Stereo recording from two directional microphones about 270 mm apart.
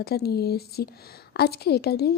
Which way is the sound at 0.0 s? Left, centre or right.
Left.